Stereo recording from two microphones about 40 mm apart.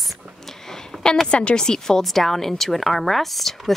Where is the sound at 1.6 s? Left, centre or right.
Centre.